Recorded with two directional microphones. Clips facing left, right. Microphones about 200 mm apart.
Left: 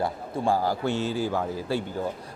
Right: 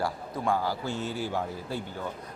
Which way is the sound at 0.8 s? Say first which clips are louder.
Left 6 dB; 80° left.